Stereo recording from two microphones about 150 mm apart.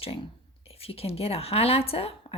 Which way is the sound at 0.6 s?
40° left (ahead or behind).